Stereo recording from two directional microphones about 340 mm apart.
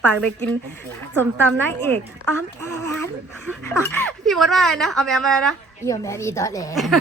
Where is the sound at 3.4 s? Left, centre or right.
Centre.